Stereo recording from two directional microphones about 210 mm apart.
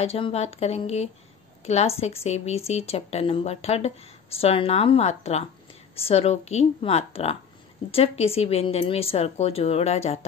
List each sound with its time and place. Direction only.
0.0 s speech: 30° left (ahead or behind)